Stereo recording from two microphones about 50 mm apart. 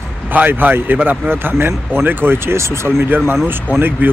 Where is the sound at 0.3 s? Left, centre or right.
Right.